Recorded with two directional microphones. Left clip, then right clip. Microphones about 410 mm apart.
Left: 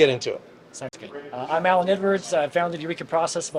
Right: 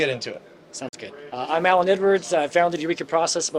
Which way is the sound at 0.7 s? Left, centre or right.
Right.